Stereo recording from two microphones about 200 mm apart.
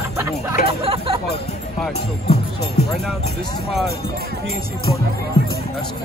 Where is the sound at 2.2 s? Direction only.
30° left (ahead or behind).